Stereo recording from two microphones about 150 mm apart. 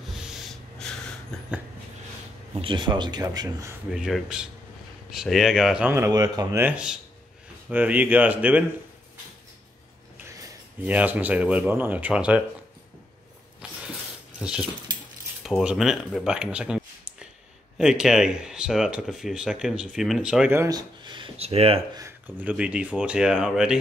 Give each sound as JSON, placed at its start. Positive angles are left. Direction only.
{"t": 0.1, "sound": "snort", "side_deg": 0}
{"t": 2.5, "sound": "speech", "side_deg": -30}
{"t": 3.9, "sound": "speech", "side_deg": -5}
{"t": 6.6, "sound": "speech", "side_deg": -5}
{"t": 10.3, "sound": "speech", "side_deg": -10}
{"t": 13.6, "sound": "a sound", "side_deg": -10}
{"t": 14.4, "sound": "speech", "side_deg": -5}
{"t": 20.5, "sound": "speech", "side_deg": -25}
{"t": 22.4, "sound": "speech", "side_deg": -10}